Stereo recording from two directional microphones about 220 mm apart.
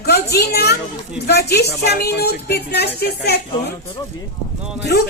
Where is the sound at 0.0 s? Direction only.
45° left (ahead or behind).